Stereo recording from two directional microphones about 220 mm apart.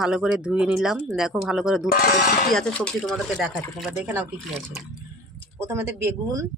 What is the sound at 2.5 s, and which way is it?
Speech, 5° left (ahead or behind).